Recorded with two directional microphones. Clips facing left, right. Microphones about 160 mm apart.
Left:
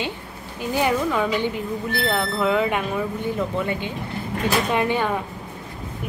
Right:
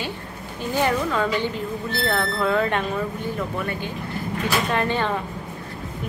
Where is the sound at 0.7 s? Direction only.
15° left (ahead or behind).